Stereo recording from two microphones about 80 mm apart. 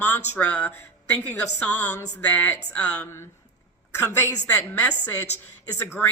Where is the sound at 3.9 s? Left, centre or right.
Left.